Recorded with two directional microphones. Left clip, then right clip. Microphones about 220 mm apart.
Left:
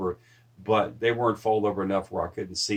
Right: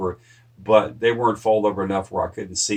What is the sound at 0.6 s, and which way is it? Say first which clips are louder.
Speech: right 7 dB; 40° left (ahead or behind).